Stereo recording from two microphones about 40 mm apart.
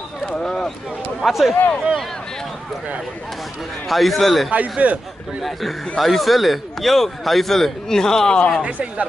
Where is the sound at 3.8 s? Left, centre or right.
Centre.